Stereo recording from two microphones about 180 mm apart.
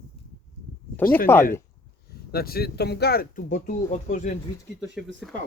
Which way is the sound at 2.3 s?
55° left (ahead or behind).